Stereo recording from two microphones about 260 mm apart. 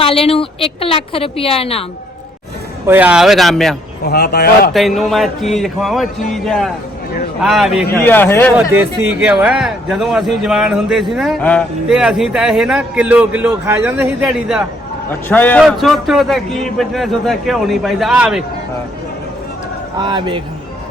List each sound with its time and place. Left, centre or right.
0.0 s a woman's voice: left
2.8 s a man's voice: centre
4.0 s speech: left
4.7 s a man's voice: centre
8.8 s a man's voice: centre
20.0 s a man's voice: centre